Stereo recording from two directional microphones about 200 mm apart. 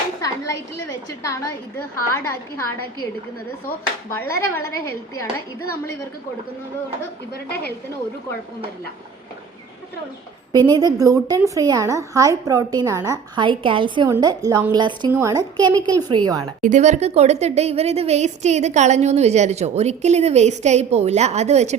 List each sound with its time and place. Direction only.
1.2 s a woman's voice: 15° left (ahead or behind)
4.1 s a woman's voice: 10° left (ahead or behind)
7.4 s a woman's voice: 55° left (ahead or behind)
10.5 s a woman's voice: 20° right (ahead or behind)
16.6 s speech: 40° right (ahead or behind)